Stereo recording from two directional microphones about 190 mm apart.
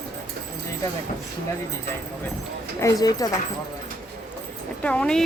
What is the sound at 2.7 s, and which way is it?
Speech, 15° left (ahead or behind).